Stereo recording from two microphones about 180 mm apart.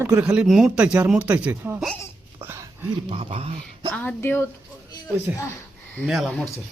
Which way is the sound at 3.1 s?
30° right (ahead or behind).